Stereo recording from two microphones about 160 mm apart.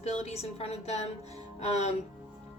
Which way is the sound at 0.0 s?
40° left (ahead or behind).